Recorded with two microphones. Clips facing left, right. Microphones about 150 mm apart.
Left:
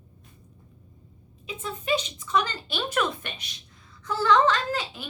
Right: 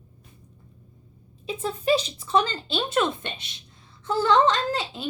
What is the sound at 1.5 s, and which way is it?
A woman's voice, 35° right (ahead or behind).